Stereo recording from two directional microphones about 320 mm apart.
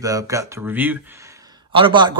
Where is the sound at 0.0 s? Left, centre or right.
Centre.